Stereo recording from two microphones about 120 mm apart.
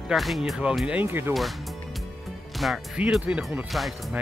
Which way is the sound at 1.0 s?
20° right (ahead or behind).